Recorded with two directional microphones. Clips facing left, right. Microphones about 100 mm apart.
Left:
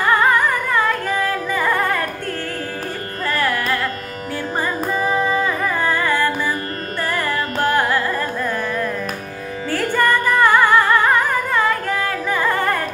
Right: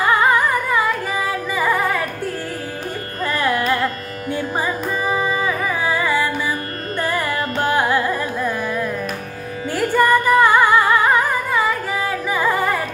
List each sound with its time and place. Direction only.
0.0 s music: 15° right (ahead or behind)
3.3 s carnatic music: 20° right (ahead or behind)
5.1 s music: 5° right (ahead or behind)
7.0 s carnatic music: 15° right (ahead or behind)
9.7 s music: 15° right (ahead or behind)